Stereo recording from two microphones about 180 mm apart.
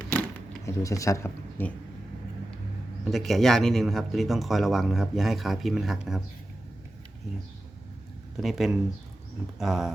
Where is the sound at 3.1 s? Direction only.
Centre (ahead or behind).